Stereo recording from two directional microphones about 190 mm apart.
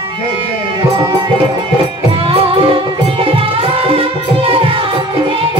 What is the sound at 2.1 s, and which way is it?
Music, 30° right (ahead or behind).